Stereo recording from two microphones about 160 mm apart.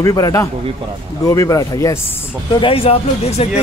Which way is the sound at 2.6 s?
35° left (ahead or behind).